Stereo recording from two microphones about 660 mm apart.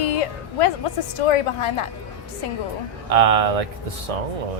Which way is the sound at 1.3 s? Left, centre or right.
Left.